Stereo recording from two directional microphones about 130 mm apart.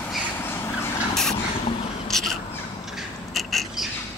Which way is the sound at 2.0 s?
Centre (ahead or behind).